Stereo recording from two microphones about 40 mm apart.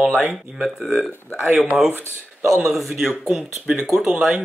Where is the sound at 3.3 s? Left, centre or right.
Centre.